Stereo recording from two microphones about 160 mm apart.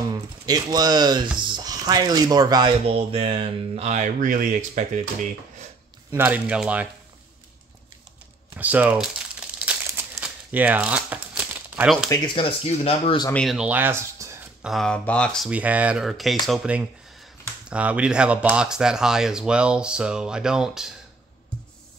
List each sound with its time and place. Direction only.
0.1 s speech: 25° right (ahead or behind)
2.9 s speech: 35° right (ahead or behind)
6.1 s speech: 10° right (ahead or behind)
8.5 s crumpling: 10° right (ahead or behind)
12.4 s speech: 35° left (ahead or behind)
13.3 s speech: centre (ahead or behind); by 14.4 s 15° right (ahead or behind)
14.6 s speech: centre (ahead or behind)
15.5 s speech: 10° right (ahead or behind)